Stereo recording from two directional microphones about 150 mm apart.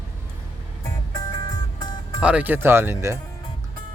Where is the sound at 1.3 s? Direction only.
30° left (ahead or behind).